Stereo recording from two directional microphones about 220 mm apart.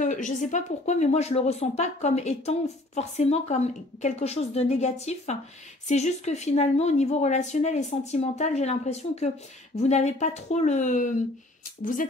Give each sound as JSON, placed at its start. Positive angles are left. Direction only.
{"t": 0.0, "sound": "speech", "side_deg": 35}